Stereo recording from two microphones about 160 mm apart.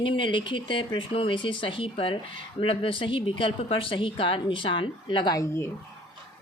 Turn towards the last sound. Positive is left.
turn(degrees=20)  # may be behind; listen again after turning